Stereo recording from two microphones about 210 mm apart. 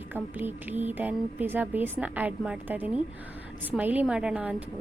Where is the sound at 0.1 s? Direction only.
10° right (ahead or behind).